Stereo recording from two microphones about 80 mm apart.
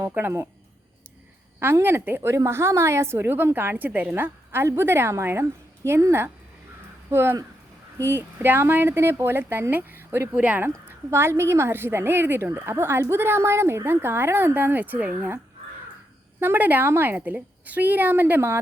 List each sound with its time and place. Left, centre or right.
0.1 s a woman's voice: right
1.5 s a woman's voice: right
10.3 s speech: centre
10.8 s a woman's voice: right
16.4 s a woman's voice: right